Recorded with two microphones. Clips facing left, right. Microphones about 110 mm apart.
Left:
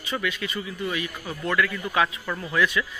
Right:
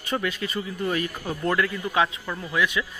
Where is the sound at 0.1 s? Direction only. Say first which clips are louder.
Right 2 dB; 35° right (ahead or behind).